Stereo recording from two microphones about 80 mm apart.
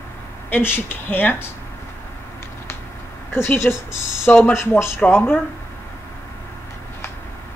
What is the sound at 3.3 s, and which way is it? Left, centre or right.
Speech, left.